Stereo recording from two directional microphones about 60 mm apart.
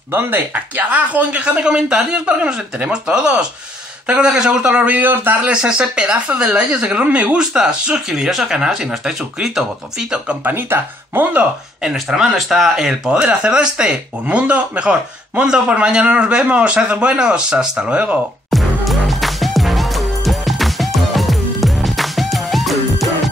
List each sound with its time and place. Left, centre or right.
0.1 s speech: right
0.8 s speech: right
5.0 s speech: right
5.4 s speech: centre
10.4 s speech: right
11.8 s speech: centre
18.5 s music: centre